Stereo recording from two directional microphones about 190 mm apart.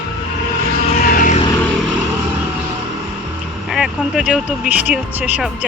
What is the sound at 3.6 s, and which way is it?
Speech, centre (ahead or behind).